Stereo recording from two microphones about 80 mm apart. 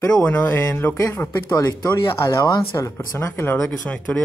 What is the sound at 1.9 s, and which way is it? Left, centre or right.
Speech, left.